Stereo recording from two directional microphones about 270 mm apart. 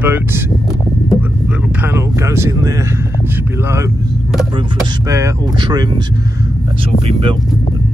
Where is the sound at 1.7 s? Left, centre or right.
Centre.